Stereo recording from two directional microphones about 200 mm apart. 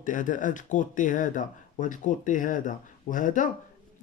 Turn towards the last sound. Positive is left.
turn(degrees=40)  # may be behind; listen again after turning